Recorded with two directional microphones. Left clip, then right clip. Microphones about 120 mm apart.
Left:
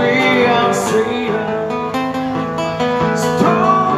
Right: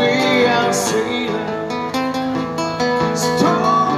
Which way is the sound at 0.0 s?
35° right (ahead or behind).